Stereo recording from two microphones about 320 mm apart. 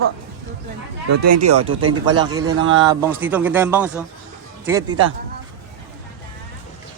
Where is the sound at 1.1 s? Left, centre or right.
Right.